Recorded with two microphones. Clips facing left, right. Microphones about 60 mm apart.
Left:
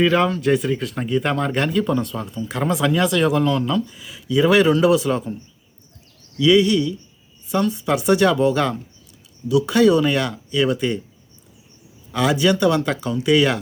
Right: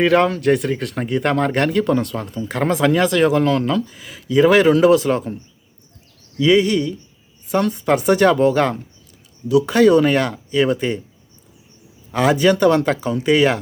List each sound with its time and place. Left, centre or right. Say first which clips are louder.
0.0 s speech: right 2 dB; right
2.3 s speech: right 3 dB; right
3.4 s speech: right 2 dB; right
3.8 s speech: right 1 dB; right
6.4 s speech: even; right
12.1 s speech: right 3 dB; right